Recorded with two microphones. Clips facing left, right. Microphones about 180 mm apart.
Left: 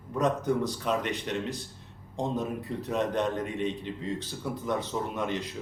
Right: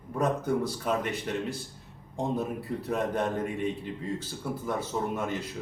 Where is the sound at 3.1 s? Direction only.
5° right (ahead or behind).